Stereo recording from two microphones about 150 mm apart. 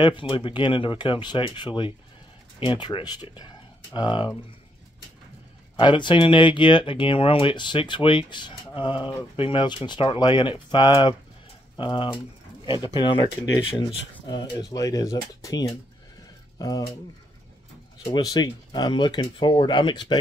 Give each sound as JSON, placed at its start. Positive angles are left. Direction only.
{"t": 0.0, "sound": "speech", "side_deg": 35}
{"t": 5.8, "sound": "speech", "side_deg": 30}
{"t": 18.2, "sound": "speech", "side_deg": 25}